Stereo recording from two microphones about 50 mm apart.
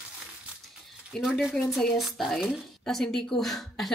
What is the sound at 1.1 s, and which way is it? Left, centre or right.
A woman's voice, centre.